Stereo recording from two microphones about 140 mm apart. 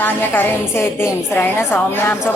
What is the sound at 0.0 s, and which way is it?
A woman's voice, 15° left (ahead or behind).